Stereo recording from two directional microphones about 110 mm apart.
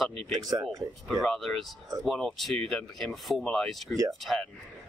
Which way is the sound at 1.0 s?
Centre (ahead or behind).